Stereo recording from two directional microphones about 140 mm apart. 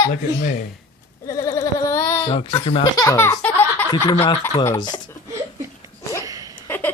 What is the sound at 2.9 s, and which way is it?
Speech, 20° left (ahead or behind).